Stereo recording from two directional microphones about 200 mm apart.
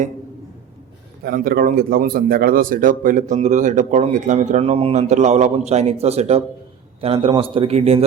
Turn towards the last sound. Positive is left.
turn(degrees=-30)  # may be behind; listen again after turning